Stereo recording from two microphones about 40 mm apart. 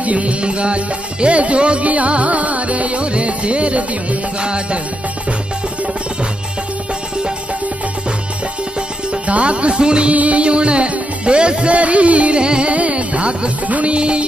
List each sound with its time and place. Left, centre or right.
0.0 s music: right
9.1 s music: right
10.1 s music: right
13.7 s music: right
13.9 s music: right